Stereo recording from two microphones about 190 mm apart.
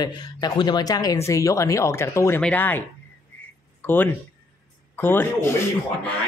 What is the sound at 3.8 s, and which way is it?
A man's voice, 10° left (ahead or behind).